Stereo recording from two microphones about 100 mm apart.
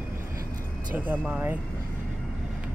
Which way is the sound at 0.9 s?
15° right (ahead or behind).